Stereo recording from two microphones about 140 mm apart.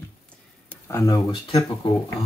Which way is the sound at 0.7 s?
20° left (ahead or behind).